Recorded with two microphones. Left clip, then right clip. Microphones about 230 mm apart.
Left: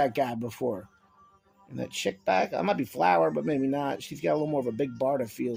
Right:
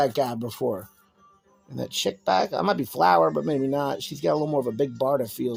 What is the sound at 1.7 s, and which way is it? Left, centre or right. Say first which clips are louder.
Speech: right 4 dB; right.